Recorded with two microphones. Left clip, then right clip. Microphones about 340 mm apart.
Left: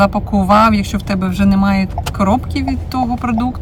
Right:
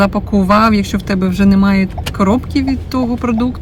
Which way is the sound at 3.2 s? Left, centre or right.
Centre.